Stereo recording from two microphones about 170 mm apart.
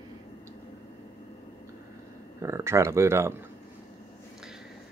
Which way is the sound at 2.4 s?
15° right (ahead or behind).